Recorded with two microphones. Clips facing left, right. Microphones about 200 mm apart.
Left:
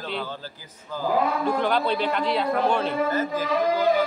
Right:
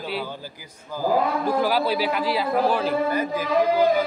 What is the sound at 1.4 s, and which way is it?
A man's voice, 5° right (ahead or behind).